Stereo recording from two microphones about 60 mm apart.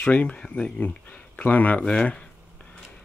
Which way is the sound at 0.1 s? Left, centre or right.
Left.